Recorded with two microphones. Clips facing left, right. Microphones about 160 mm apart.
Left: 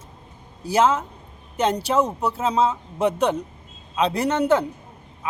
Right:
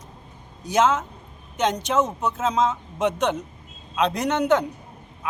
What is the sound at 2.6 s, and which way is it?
Speech, 30° left (ahead or behind).